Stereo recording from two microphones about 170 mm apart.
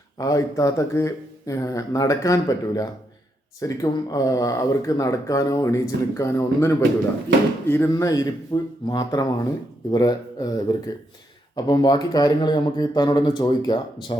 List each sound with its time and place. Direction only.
0.2 s speech: 20° left (ahead or behind)